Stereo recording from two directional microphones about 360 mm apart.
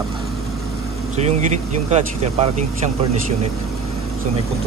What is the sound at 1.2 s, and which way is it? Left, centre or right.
Speech, centre.